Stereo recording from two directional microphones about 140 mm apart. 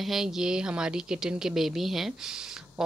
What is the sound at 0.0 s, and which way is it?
Speech, centre (ahead or behind).